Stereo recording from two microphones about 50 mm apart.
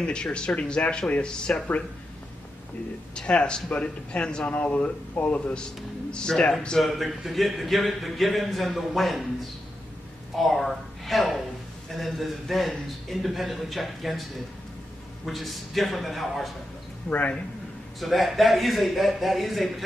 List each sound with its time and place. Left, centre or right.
0.0 s speech: centre
3.2 s speech: centre
6.8 s speech: centre
10.3 s a woman's voice: centre
15.2 s speech: centre
17.1 s speech: left
18.0 s speech: centre